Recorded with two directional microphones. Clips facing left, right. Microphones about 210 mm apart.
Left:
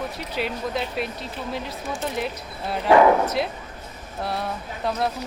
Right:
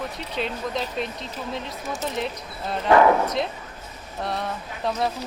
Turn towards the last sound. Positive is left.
turn(degrees=0)  # may be behind; listen again after turning